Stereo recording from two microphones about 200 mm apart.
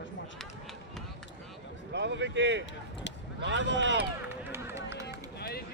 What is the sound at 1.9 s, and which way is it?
Speech, 60° right (ahead or behind).